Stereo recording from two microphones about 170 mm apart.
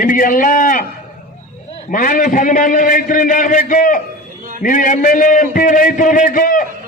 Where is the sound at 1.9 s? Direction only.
50° left (ahead or behind).